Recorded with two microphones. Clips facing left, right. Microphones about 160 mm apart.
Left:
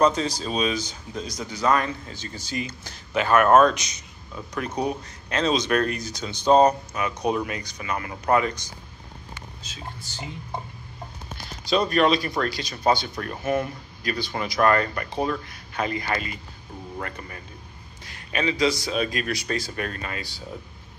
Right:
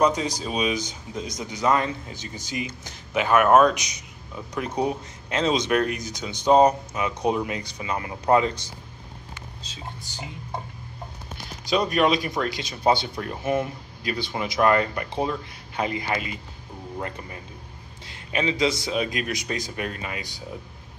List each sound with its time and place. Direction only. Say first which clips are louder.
0.0 s speech: left 1 dB; 15° right (ahead or behind); by 9.8 s 35° right (ahead or behind)
11.7 s speech: left 1 dB; 10° right (ahead or behind)
18.0 s speech: even; 20° right (ahead or behind)